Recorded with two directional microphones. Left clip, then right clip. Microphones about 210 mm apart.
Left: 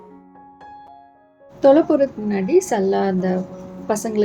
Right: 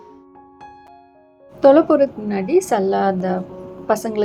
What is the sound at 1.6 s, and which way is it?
A woman's voice, 10° left (ahead or behind).